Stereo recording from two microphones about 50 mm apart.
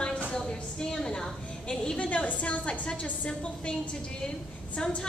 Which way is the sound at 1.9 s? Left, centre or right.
Left.